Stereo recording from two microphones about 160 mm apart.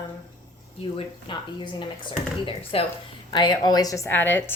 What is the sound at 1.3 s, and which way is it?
A woman's voice, 30° left (ahead or behind).